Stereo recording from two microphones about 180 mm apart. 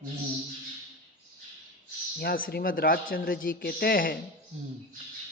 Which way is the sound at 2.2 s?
55° left (ahead or behind).